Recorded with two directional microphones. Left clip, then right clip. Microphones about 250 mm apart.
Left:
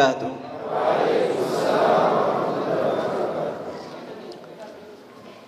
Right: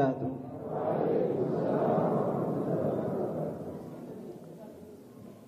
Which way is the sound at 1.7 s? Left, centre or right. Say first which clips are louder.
Left 12 dB; centre.